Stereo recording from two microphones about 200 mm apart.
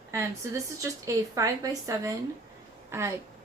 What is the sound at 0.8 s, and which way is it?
A woman's voice, 15° right (ahead or behind).